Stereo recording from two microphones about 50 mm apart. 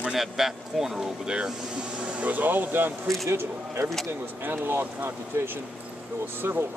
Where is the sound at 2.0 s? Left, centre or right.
Right.